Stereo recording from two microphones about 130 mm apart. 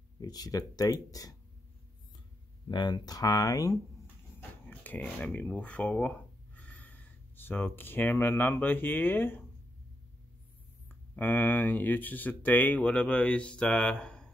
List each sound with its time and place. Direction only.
0.2 s speech: 30° left (ahead or behind)
2.7 s speech: 35° left (ahead or behind)
4.4 s speech: 15° left (ahead or behind)
10.9 s speech: 15° left (ahead or behind)